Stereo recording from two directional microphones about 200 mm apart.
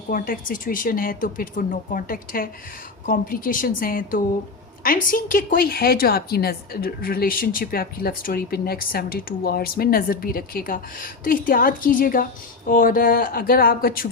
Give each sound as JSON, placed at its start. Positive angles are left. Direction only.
{"t": 0.1, "sound": "a woman's voice", "side_deg": 40}